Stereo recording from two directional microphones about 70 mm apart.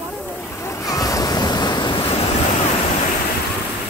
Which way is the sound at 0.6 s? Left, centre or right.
Left.